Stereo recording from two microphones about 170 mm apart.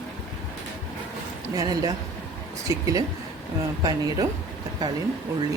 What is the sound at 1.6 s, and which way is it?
Speech, 20° right (ahead or behind).